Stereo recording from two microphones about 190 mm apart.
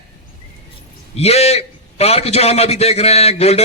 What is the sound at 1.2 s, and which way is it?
A man's voice, 35° left (ahead or behind).